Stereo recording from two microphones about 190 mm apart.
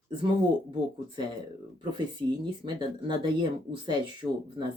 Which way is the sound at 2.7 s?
25° right (ahead or behind).